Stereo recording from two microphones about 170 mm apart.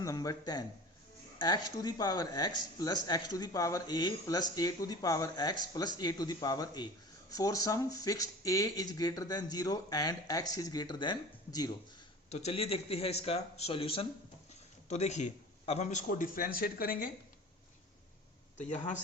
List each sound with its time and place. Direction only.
0.0 s speech: 20° left (ahead or behind)
12.3 s a man's voice: 40° left (ahead or behind); by 17.1 s 60° left (ahead or behind)
18.5 s speech: 45° left (ahead or behind)